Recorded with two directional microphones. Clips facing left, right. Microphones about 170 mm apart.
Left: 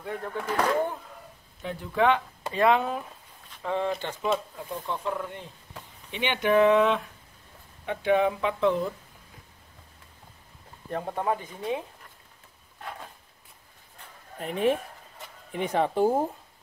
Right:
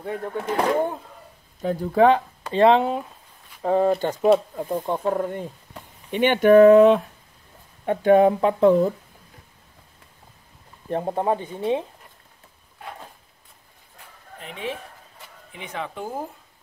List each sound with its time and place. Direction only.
0.0 s speech: 30° right (ahead or behind)
1.6 s speech: 40° right (ahead or behind)
3.6 s speech: 40° right (ahead or behind)
10.9 s speech: 30° right (ahead or behind)
14.4 s speech: 50° left (ahead or behind); by 16.3 s 30° left (ahead or behind)